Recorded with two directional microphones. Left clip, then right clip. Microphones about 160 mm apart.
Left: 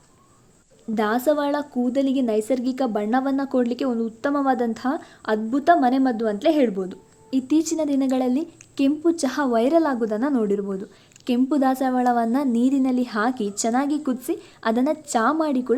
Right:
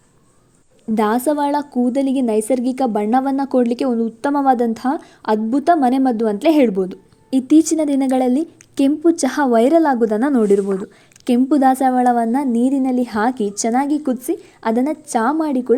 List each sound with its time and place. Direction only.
0.9 s a woman's voice: 35° right (ahead or behind)